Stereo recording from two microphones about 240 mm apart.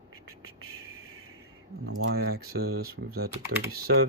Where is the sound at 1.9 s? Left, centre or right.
Right.